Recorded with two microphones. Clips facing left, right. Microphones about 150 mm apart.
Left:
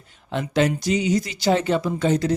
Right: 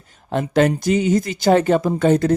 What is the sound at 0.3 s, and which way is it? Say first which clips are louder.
Speech: right 4 dB; 45° right (ahead or behind).